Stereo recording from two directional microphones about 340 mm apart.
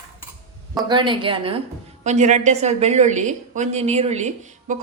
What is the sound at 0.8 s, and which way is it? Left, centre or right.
A woman's voice, centre.